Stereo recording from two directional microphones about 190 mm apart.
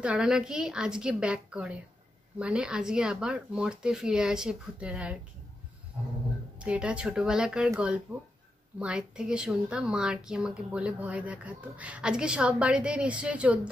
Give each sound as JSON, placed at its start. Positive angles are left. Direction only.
{"t": 0.0, "sound": "speech", "side_deg": -5}
{"t": 6.6, "sound": "speech", "side_deg": -5}